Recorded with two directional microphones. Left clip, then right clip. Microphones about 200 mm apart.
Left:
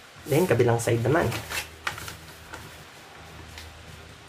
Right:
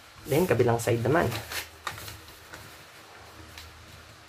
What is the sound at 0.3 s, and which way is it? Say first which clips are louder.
Speech: left 2 dB; 10° right (ahead or behind).